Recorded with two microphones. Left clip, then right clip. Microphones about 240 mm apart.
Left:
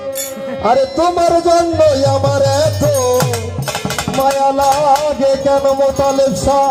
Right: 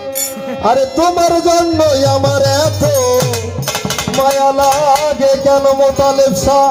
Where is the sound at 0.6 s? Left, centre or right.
Right.